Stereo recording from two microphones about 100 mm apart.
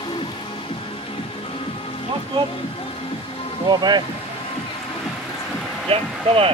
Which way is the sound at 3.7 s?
45° right (ahead or behind).